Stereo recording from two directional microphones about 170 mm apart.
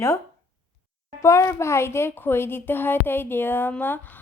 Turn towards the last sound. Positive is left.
turn(degrees=10)  # may be behind; listen again after turning